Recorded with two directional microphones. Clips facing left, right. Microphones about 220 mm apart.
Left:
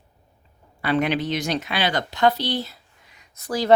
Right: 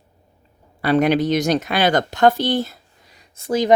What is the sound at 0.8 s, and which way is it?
Speech, 40° right (ahead or behind).